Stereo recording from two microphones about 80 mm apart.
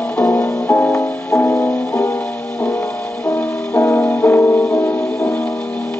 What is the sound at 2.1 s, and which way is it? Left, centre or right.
Music, centre.